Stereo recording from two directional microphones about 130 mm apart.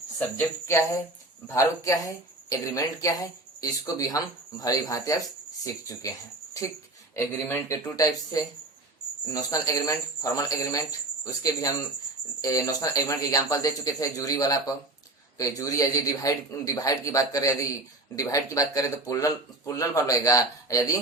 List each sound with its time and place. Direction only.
0.2 s speech: 20° left (ahead or behind)
7.2 s speech: 20° left (ahead or behind)